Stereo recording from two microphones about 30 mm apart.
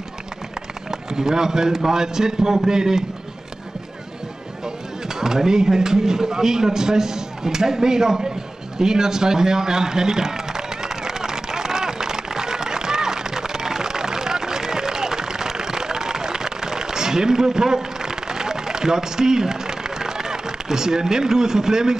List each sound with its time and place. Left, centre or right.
1.1 s speech: centre
5.0 s speech: centre
8.7 s a sound: right